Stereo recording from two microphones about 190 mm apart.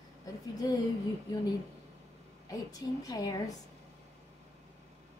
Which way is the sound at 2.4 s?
20° left (ahead or behind).